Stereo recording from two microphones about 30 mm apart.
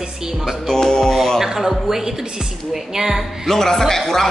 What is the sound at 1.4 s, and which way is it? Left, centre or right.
Speech, centre.